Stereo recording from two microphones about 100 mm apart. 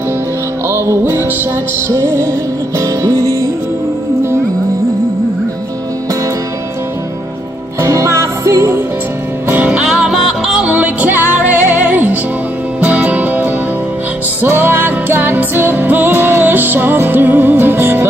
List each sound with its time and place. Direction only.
0.7 s music: 25° right (ahead or behind)
7.8 s music: 30° right (ahead or behind)
9.5 s music: 15° right (ahead or behind)